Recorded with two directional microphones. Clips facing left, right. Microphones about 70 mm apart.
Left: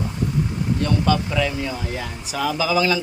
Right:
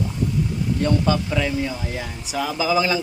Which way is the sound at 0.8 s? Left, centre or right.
Centre.